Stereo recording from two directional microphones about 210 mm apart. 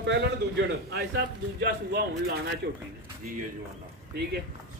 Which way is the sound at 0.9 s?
55° right (ahead or behind).